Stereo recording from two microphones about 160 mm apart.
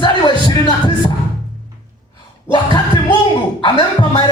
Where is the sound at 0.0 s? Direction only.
30° left (ahead or behind).